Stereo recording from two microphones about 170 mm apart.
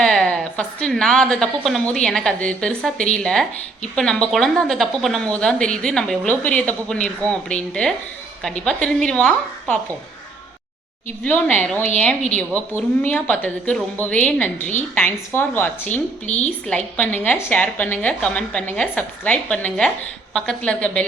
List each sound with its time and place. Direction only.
0.0 s a woman's voice: 5° left (ahead or behind)
11.2 s a woman's voice: 5° left (ahead or behind)
16.2 s a woman's voice: 40° left (ahead or behind)
16.6 s a woman's voice: 5° left (ahead or behind)